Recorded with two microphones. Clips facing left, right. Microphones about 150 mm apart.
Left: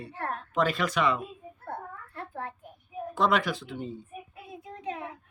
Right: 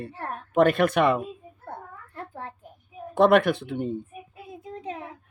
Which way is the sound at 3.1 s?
60° right (ahead or behind).